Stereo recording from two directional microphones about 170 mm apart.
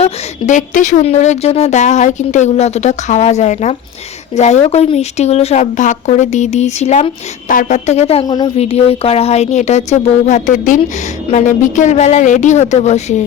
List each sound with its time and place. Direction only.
0.0 s speech: 45° left (ahead or behind)